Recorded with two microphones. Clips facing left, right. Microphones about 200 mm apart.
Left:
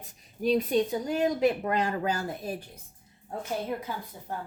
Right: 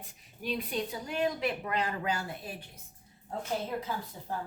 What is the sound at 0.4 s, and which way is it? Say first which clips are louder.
Speech: left 9 dB; 40° left (ahead or behind).